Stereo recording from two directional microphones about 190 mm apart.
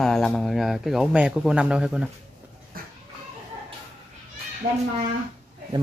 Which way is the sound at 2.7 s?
50° right (ahead or behind).